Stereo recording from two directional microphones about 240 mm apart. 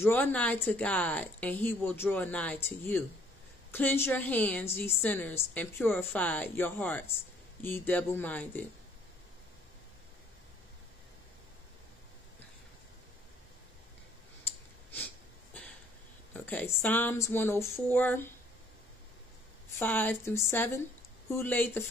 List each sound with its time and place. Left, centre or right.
0.0 s a woman's voice: centre
16.3 s a woman's voice: centre
19.8 s a woman's voice: centre